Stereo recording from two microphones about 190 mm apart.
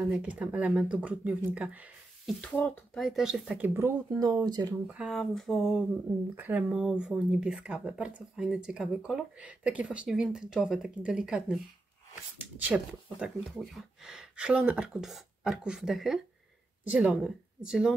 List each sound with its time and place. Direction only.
0.1 s speech: 5° right (ahead or behind)
2.4 s speech: 10° left (ahead or behind); by 3.9 s 10° right (ahead or behind)
4.1 s speech: 20° right (ahead or behind)
4.8 s speech: 5° right (ahead or behind)